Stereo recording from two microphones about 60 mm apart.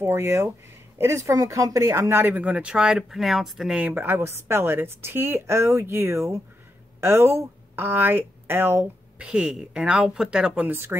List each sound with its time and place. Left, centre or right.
0.1 s a woman's voice: right
2.3 s speech: right
3.0 s speech: centre
3.9 s a woman's voice: right
9.2 s speech: centre
10.7 s a woman's voice: right